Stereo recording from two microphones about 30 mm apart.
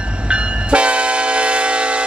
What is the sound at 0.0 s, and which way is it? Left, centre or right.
Train, right.